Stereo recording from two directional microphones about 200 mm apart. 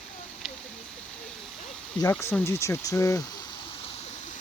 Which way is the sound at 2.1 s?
10° left (ahead or behind).